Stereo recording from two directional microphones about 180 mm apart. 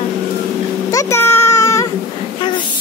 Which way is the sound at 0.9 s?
15° left (ahead or behind).